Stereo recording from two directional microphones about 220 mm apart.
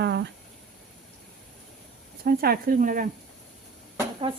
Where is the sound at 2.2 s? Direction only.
45° right (ahead or behind).